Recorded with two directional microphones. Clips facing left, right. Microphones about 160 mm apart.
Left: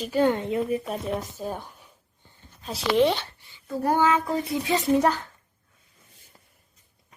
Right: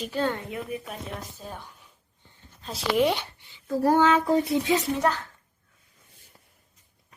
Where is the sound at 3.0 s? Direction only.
10° right (ahead or behind).